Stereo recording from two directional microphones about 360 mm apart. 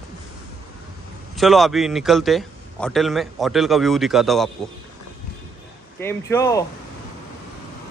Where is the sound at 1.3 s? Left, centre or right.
Centre.